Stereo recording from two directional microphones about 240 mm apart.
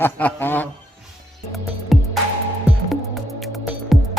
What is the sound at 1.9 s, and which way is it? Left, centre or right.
Music, centre.